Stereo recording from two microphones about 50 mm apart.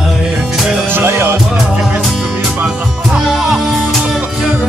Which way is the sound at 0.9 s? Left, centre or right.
Right.